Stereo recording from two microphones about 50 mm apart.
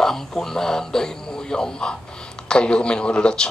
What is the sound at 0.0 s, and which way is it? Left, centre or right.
A man's voice, centre.